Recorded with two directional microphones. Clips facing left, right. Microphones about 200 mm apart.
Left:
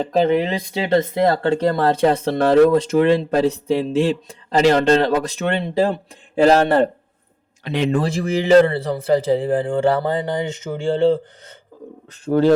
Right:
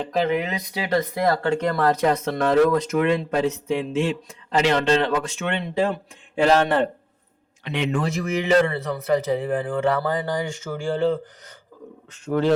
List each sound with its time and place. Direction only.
0.1 s speech: 30° left (ahead or behind)
12.2 s speech: 35° left (ahead or behind)